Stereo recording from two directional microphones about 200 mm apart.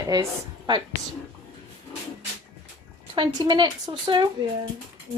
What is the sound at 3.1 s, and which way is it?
Speech, 25° right (ahead or behind).